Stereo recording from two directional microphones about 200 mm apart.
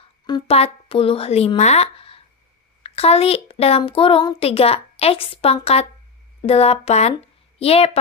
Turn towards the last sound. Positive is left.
turn(degrees=30)  # may be behind; listen again after turning